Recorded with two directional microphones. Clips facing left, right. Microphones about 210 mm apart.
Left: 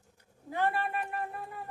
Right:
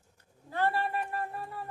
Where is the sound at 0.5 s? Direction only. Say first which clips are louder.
Right 1 dB; 15° left (ahead or behind).